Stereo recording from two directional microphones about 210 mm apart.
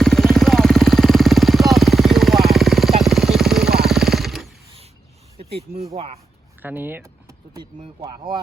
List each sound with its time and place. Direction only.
0.0 s vehicle: centre (ahead or behind)
3.8 s jackhammer: centre (ahead or behind)
5.5 s a sound: 30° right (ahead or behind)
6.6 s speech: 10° right (ahead or behind)